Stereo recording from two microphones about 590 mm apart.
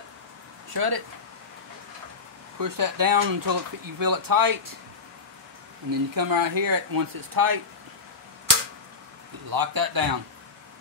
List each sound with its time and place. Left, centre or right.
0.7 s speech: right
2.6 s speech: right
5.9 s speech: right
9.5 s speech: right